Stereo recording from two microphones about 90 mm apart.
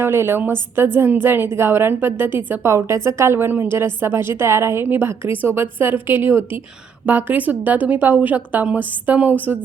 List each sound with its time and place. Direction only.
0.0 s a woman's voice: 25° right (ahead or behind)